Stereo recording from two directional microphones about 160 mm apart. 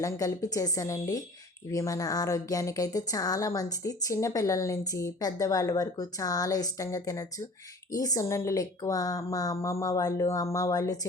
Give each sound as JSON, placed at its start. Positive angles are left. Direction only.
{"t": 0.0, "sound": "speech", "side_deg": 20}